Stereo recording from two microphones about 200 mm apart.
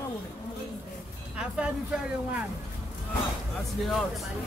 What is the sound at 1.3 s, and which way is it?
Speech, 5° right (ahead or behind).